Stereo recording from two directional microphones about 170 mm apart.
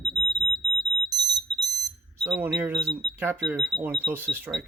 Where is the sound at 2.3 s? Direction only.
10° right (ahead or behind).